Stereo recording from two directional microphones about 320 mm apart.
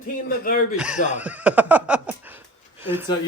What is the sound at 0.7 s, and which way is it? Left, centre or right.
Speech, centre.